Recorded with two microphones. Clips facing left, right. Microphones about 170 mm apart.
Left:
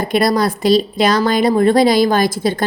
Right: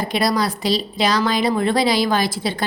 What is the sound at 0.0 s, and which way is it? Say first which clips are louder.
Speech: left 5 dB; 50° left (ahead or behind).